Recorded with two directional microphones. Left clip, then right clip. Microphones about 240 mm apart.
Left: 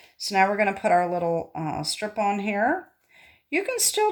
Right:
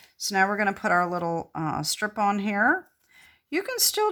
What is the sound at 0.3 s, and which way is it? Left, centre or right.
Speech, centre.